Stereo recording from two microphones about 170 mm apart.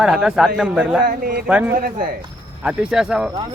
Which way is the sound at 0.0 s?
5° right (ahead or behind).